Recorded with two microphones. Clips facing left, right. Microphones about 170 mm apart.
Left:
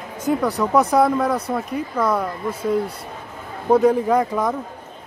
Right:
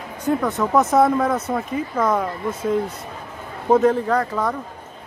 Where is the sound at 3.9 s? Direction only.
10° left (ahead or behind).